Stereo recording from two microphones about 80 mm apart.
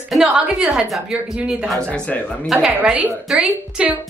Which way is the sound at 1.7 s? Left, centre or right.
Centre.